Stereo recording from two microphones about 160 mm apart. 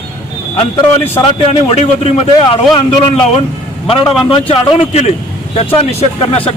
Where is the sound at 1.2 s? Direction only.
35° left (ahead or behind).